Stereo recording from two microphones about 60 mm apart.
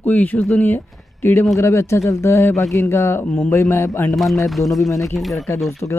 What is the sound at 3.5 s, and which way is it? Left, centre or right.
Speech, left.